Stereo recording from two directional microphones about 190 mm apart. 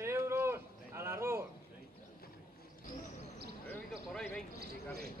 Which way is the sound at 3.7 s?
5° left (ahead or behind).